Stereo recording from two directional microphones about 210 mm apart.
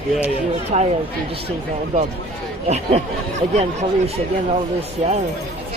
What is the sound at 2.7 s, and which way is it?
Speech, 30° right (ahead or behind).